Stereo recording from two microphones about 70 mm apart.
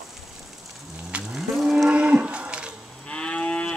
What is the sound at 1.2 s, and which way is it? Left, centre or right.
Livestock, centre.